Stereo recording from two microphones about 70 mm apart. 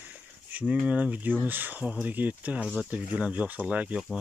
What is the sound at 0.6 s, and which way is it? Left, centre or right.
Speech, centre.